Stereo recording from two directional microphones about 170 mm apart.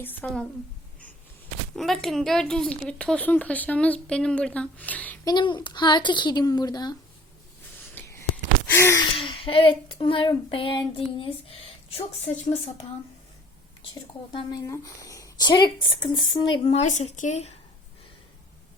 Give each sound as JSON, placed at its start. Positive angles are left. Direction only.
{"t": 0.0, "sound": "a woman's voice", "side_deg": 10}
{"t": 1.7, "sound": "speech", "side_deg": 0}
{"t": 5.2, "sound": "speech", "side_deg": 25}
{"t": 7.9, "sound": "gasp", "side_deg": 15}
{"t": 9.1, "sound": "a sound", "side_deg": 30}
{"t": 14.7, "sound": "speech", "side_deg": 20}